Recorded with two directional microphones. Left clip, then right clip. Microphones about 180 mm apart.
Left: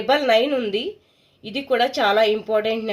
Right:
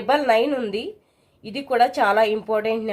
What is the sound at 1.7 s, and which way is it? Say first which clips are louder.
Speech: right 1 dB; 25° left (ahead or behind).